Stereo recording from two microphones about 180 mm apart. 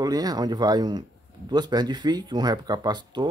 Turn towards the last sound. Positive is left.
turn(degrees=-25)  # may be behind; listen again after turning